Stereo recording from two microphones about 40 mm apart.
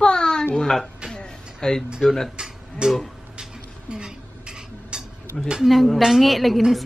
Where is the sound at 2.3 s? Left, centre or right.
Right.